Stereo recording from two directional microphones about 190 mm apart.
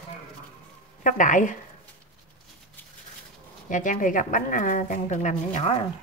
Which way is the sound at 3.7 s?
45° left (ahead or behind).